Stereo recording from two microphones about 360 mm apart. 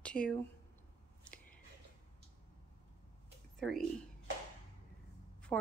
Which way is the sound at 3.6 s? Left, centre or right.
Centre.